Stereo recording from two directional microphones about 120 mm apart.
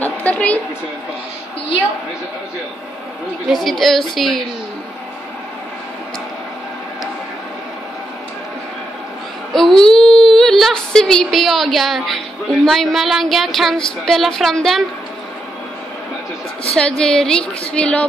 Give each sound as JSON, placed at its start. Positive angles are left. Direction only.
{"t": 0.0, "sound": "a sound", "side_deg": 10}
{"t": 3.4, "sound": "speech", "side_deg": 0}
{"t": 9.5, "sound": "a woman's voice", "side_deg": 5}
{"t": 16.7, "sound": "a woman's voice", "side_deg": 5}